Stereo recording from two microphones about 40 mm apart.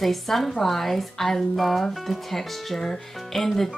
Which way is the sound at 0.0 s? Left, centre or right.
Centre.